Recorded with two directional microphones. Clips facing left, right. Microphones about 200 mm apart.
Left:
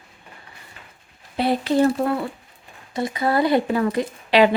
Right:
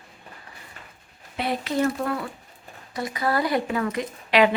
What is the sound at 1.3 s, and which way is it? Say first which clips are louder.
Speech: left 6 dB; 30° left (ahead or behind).